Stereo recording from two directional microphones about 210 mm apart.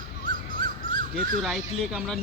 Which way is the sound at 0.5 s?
25° left (ahead or behind).